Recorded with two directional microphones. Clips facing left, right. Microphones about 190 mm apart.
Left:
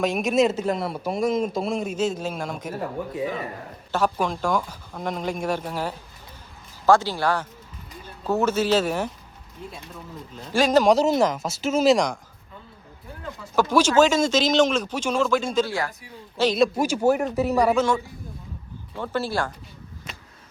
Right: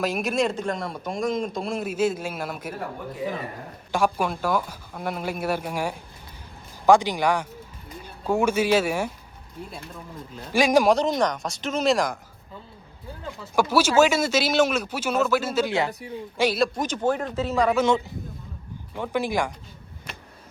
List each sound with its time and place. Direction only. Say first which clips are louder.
0.0 s a man's voice: left 4 dB; centre (ahead or behind)
3.9 s speech: even; 10° right (ahead or behind)
10.3 s speech: even; 10° right (ahead or behind)
10.8 s a man's voice: left 2 dB; 5° left (ahead or behind)
13.4 s speech: left 1 dB; 10° right (ahead or behind)
15.6 s speech: right 3 dB; 20° right (ahead or behind)
16.4 s speech: left 2 dB; 10° right (ahead or behind)
16.7 s speech: left 4 dB; 10° left (ahead or behind)
17.8 s speech: right 2 dB; 20° right (ahead or behind)